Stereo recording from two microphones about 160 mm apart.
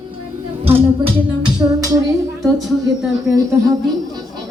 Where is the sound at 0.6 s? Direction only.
35° right (ahead or behind).